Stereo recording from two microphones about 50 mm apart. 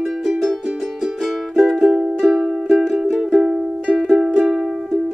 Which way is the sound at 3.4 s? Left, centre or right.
Centre.